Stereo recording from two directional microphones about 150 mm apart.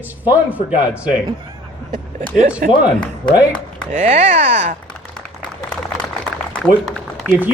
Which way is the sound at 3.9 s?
50° right (ahead or behind).